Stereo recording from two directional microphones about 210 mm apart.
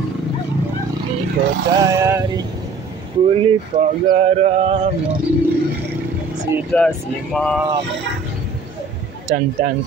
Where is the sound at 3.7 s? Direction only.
35° right (ahead or behind).